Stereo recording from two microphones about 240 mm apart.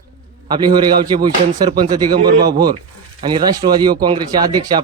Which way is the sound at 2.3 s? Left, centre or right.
Right.